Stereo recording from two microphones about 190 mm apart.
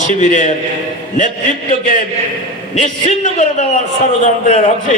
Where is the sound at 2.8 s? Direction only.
35° left (ahead or behind).